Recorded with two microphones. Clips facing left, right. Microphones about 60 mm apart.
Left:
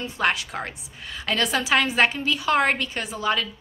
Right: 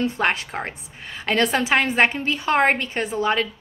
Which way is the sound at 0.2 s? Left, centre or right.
Right.